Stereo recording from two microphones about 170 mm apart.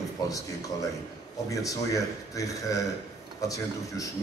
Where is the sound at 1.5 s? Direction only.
20° left (ahead or behind).